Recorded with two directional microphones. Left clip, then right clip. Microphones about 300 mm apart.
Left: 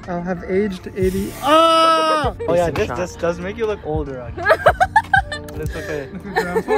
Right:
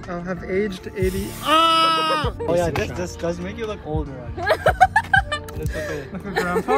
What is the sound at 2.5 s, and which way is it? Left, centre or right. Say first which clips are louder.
Speech: left 3 dB; left.